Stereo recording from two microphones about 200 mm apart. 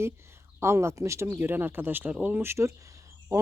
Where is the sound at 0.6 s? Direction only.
15° right (ahead or behind).